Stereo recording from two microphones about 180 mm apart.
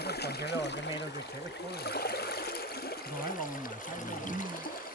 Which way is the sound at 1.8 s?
60° left (ahead or behind).